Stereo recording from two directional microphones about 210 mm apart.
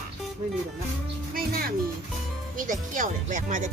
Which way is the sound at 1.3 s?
45° right (ahead or behind).